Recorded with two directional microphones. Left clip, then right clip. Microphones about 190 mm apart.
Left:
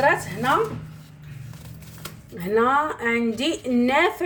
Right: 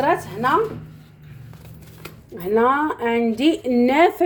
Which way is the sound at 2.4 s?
25° right (ahead or behind).